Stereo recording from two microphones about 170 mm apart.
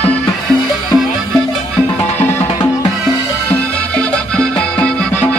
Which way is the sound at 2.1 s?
15° left (ahead or behind).